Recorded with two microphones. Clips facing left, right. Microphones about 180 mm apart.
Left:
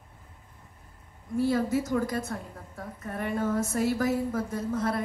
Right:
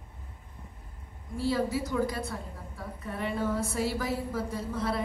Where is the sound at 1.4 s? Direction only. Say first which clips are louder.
Left 3 dB; 50° left (ahead or behind).